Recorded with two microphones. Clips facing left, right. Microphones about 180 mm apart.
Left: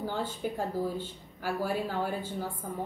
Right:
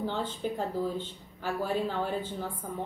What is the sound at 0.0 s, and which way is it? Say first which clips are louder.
Speech: right 1 dB; 10° left (ahead or behind).